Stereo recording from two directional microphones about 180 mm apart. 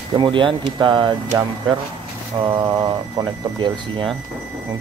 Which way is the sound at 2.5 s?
20° right (ahead or behind).